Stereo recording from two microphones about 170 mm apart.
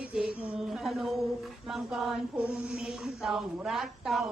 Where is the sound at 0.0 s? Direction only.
5° right (ahead or behind).